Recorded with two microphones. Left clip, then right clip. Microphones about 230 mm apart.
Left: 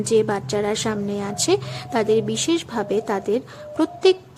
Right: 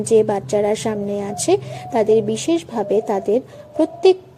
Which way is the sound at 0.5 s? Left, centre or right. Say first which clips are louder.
Right 5 dB; left.